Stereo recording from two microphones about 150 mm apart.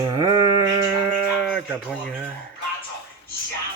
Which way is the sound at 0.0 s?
20° right (ahead or behind).